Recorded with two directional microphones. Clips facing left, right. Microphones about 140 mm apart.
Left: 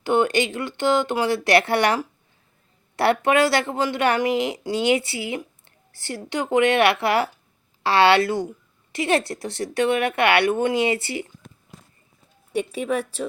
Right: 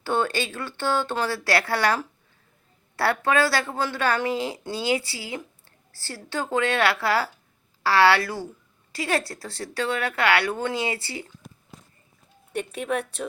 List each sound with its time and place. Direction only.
0.0 s a woman's voice: 15° left (ahead or behind)
12.5 s speech: 5° left (ahead or behind)